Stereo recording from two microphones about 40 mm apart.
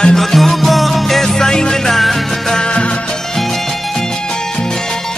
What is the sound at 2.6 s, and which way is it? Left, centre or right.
Music of bollywood, left.